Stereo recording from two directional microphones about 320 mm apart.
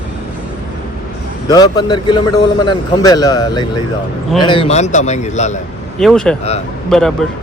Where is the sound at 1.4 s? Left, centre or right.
Centre.